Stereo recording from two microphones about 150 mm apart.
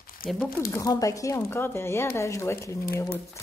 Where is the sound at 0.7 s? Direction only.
25° left (ahead or behind).